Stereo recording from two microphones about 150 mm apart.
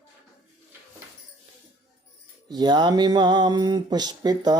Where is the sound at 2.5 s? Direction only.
30° right (ahead or behind).